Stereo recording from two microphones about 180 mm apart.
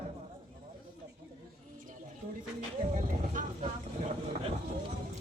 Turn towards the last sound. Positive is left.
turn(degrees=-45)  # may be behind; listen again after turning